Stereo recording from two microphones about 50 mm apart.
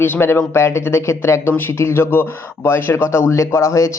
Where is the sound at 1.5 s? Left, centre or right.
Left.